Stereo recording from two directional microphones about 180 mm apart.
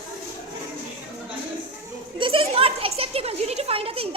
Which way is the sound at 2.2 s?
30° right (ahead or behind).